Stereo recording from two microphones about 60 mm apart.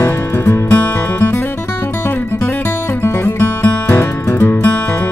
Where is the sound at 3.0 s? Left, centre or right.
Left.